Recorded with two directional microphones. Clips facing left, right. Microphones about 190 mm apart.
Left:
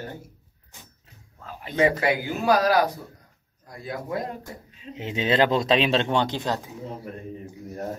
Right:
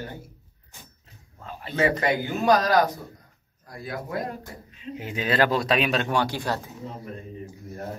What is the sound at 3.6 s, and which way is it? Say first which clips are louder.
Speech: even; 25° left (ahead or behind).